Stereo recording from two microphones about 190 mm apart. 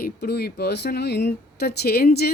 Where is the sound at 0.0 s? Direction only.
55° left (ahead or behind).